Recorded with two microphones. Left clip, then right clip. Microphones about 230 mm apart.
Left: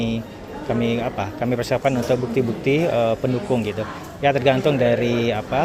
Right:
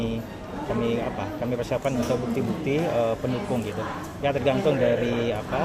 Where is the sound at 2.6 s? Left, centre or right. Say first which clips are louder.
Left 5 dB; left.